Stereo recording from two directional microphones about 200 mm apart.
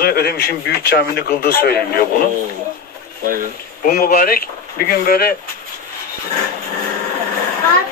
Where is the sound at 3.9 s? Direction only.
50° left (ahead or behind).